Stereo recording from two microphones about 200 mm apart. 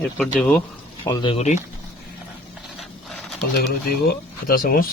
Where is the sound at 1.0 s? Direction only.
20° left (ahead or behind).